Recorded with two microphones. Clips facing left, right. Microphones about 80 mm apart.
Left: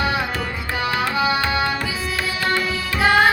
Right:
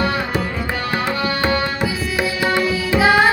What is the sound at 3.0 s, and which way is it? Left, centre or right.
Music, centre.